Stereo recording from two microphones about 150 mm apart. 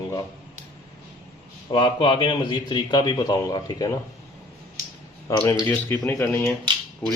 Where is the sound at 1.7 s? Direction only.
35° left (ahead or behind).